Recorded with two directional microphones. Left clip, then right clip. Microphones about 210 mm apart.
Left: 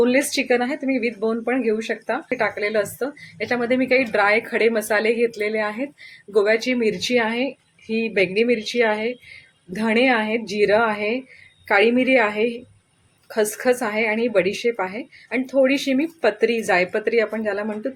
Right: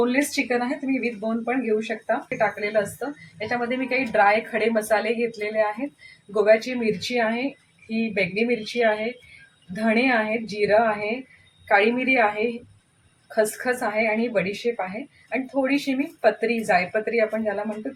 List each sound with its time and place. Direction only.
0.0 s a woman's voice: 40° left (ahead or behind)